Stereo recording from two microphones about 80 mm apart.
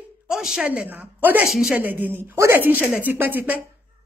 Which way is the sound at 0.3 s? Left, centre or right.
Centre.